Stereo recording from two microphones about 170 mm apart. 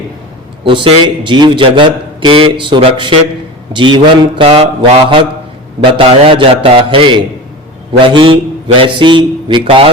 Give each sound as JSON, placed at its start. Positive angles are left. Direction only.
{"t": 0.6, "sound": "a man's voice", "side_deg": -30}
{"t": 3.7, "sound": "mantra", "side_deg": -25}
{"t": 8.0, "sound": "a man's voice", "side_deg": -30}